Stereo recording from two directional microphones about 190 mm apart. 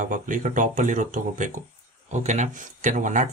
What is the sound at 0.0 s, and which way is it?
Speech, 45° right (ahead or behind).